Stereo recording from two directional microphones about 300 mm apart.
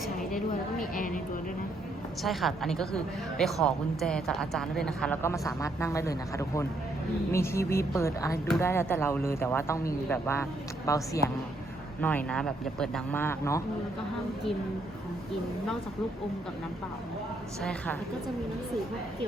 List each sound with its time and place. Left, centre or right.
0.8 s speech: left
2.2 s a woman's voice: centre
17.6 s a woman's voice: centre